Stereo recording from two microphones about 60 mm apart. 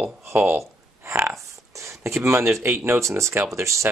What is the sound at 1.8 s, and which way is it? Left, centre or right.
Speech, right.